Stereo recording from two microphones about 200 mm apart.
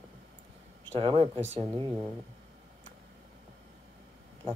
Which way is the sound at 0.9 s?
25° right (ahead or behind).